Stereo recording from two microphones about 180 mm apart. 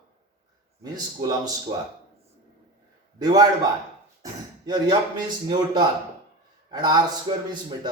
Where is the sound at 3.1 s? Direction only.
20° right (ahead or behind).